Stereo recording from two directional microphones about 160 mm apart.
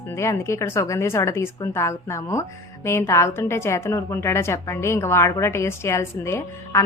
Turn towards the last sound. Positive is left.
turn(degrees=15)  # may be behind; listen again after turning